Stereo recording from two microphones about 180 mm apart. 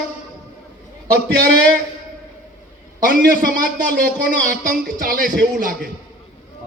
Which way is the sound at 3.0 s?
50° right (ahead or behind).